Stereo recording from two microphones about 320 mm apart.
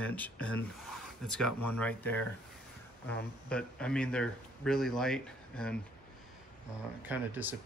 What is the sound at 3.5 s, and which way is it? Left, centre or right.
Speech, centre.